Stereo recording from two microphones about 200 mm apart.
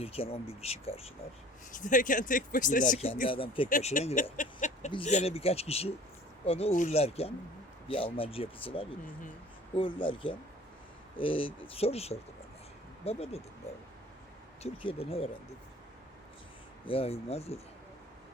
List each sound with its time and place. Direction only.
0.0 s speech: 30° left (ahead or behind)
1.7 s speech: 40° left (ahead or behind)
3.2 s speech: 25° left (ahead or behind)
3.7 s speech: 40° left (ahead or behind)
14.6 s speech: 30° left (ahead or behind)
16.8 s speech: 30° left (ahead or behind)